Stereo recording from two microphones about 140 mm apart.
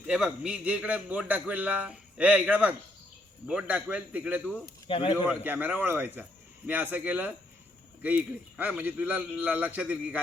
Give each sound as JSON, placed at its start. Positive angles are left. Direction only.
{"t": 0.0, "sound": "a man's voice", "side_deg": -5}
{"t": 4.9, "sound": "speech", "side_deg": 40}
{"t": 5.4, "sound": "a man's voice", "side_deg": -10}